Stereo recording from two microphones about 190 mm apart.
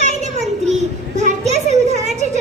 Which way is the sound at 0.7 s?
40° right (ahead or behind).